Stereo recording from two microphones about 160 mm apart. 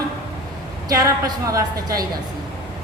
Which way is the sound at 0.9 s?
20° right (ahead or behind).